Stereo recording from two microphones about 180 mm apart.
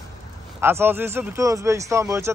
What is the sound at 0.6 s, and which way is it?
A man's voice, 15° right (ahead or behind).